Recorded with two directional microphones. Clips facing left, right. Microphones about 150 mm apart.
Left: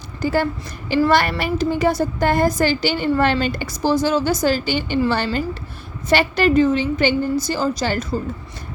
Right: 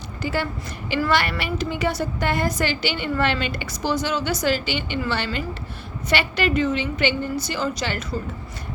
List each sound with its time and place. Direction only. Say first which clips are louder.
0.2 s a woman's voice: left 6 dB; 40° left (ahead or behind)
0.9 s a child's voice: left 7 dB; 30° left (ahead or behind)
1.1 s a woman's voice: left 5 dB; 45° left (ahead or behind)